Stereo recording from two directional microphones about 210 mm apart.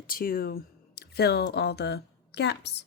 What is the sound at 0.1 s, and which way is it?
A woman's voice, 45° left (ahead or behind).